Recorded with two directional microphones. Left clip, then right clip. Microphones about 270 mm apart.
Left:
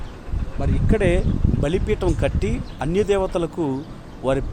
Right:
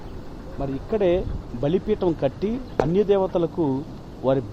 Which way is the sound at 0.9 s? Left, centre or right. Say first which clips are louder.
Left 1 dB; left.